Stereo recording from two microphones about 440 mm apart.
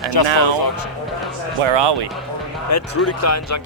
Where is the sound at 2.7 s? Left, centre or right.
Left.